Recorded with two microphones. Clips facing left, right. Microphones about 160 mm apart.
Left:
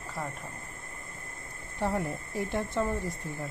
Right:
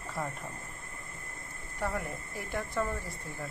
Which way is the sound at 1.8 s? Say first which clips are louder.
Left 4 dB; 30° left (ahead or behind).